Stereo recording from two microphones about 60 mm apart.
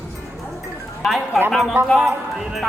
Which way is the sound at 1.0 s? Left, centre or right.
Centre.